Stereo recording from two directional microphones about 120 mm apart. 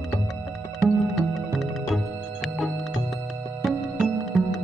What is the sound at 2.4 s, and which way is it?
Music, centre (ahead or behind).